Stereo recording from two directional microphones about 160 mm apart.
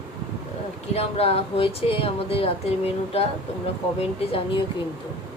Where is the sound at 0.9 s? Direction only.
40° left (ahead or behind).